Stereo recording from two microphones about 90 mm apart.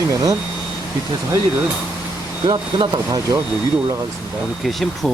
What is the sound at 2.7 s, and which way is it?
Speech, 55° right (ahead or behind).